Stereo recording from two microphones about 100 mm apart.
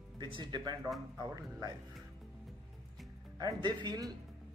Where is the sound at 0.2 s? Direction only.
50° right (ahead or behind).